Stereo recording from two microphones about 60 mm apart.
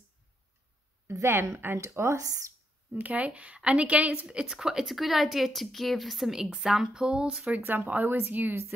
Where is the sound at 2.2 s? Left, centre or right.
Right.